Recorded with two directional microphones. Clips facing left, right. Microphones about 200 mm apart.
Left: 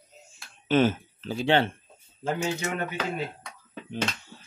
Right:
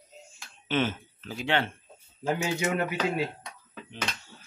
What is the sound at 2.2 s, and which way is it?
Speech, 5° right (ahead or behind).